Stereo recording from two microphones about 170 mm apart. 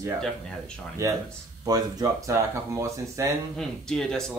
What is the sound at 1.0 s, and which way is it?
Speech, 20° right (ahead or behind).